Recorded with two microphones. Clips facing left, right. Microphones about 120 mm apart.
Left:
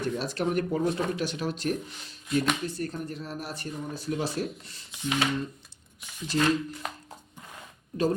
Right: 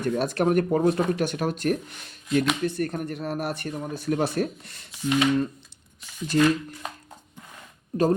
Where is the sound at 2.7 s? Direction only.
65° right (ahead or behind).